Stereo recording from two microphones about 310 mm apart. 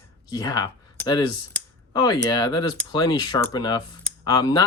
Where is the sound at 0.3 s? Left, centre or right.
Centre.